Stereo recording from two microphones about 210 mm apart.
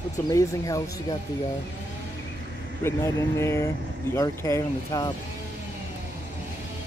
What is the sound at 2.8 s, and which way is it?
Speech, 15° left (ahead or behind).